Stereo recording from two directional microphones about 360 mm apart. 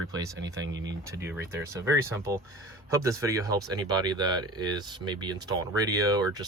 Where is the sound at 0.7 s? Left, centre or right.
Right.